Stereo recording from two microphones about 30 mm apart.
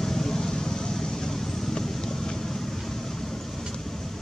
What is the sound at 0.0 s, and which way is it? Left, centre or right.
Vehicle, centre.